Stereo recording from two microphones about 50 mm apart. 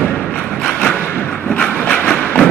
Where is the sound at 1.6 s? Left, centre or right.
Left.